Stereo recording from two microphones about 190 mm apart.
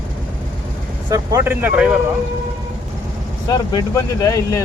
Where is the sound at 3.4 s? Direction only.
20° left (ahead or behind).